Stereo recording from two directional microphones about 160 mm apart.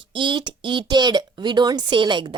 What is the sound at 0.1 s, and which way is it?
A woman's voice, 30° right (ahead or behind).